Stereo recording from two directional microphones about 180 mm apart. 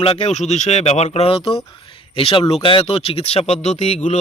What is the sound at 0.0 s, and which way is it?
Speech, 35° left (ahead or behind).